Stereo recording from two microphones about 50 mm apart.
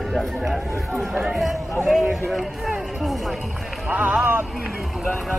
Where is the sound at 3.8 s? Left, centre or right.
Right.